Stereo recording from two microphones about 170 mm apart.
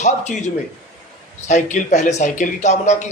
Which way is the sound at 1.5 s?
45° left (ahead or behind).